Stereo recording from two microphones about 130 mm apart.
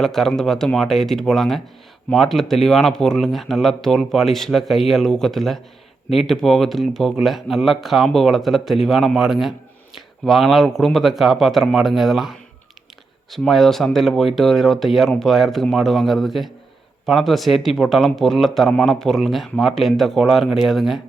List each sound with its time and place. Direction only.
0.0 s speech: 5° left (ahead or behind)